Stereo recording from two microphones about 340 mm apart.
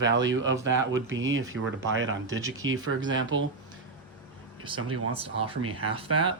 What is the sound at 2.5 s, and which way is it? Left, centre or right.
Speech, right.